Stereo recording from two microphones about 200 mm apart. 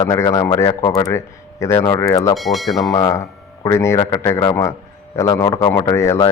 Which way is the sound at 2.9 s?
15° left (ahead or behind).